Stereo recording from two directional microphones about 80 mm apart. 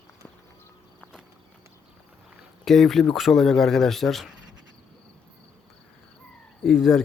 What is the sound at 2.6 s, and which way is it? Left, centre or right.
Speech, centre.